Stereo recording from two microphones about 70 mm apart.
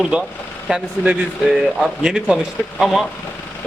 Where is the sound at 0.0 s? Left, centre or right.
Centre.